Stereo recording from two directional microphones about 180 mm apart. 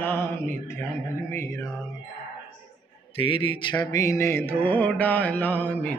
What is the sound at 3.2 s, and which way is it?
Speech, 30° left (ahead or behind).